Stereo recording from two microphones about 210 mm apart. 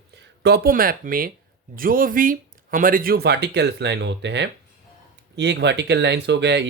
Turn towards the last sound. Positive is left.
turn(degrees=-55)  # may be behind; listen again after turning